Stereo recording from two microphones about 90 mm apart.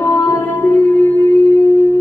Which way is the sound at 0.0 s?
25° left (ahead or behind).